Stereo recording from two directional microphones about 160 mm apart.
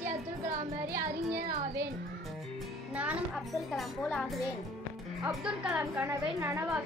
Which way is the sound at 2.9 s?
10° right (ahead or behind).